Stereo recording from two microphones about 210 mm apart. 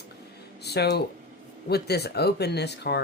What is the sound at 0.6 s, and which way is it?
Speech, 50° left (ahead or behind).